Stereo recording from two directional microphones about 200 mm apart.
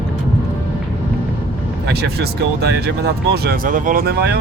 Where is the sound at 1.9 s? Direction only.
55° right (ahead or behind).